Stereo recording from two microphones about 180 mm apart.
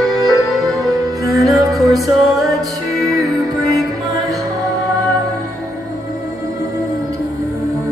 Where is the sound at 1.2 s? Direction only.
20° right (ahead or behind).